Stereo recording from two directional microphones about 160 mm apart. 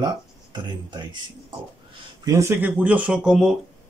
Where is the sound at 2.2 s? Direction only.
15° right (ahead or behind).